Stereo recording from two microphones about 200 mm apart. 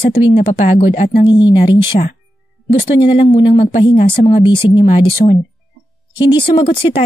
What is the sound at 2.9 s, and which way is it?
Speech, 25° left (ahead or behind).